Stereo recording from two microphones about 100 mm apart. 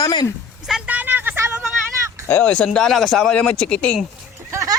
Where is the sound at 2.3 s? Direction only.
15° left (ahead or behind).